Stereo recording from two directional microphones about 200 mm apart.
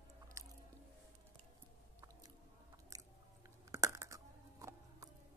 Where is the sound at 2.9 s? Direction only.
15° right (ahead or behind).